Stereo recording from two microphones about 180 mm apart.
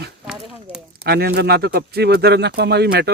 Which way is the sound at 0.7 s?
30° left (ahead or behind).